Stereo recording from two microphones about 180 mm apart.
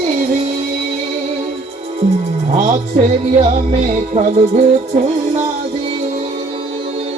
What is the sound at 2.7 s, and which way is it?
Music, 30° right (ahead or behind).